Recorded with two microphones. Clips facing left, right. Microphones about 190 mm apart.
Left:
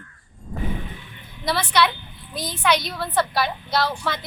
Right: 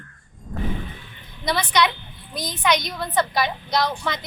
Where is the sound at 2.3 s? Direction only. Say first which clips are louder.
Even; 15° right (ahead or behind).